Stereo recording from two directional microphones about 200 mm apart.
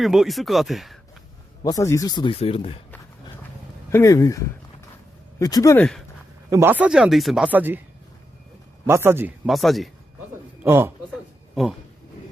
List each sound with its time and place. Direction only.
0.0 s speech: centre (ahead or behind)
1.6 s speech: 15° left (ahead or behind)
3.9 s speech: 15° left (ahead or behind)
6.5 s speech: 10° right (ahead or behind)
8.9 s speech: 10° right (ahead or behind)
9.5 s speech: centre (ahead or behind)
10.6 s a man's voice: 10° right (ahead or behind)